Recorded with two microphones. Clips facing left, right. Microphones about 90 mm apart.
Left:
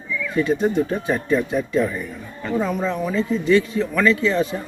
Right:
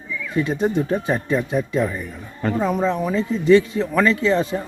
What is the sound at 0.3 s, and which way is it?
Speech, 20° right (ahead or behind).